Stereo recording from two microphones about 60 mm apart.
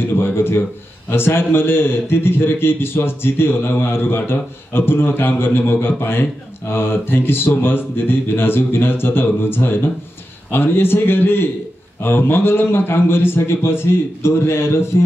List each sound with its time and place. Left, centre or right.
0.0 s a man's voice: left